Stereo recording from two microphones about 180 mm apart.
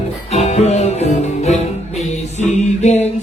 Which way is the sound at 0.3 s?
40° left (ahead or behind).